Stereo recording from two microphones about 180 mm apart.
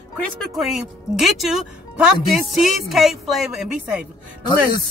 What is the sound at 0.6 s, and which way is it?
Speech, centre (ahead or behind).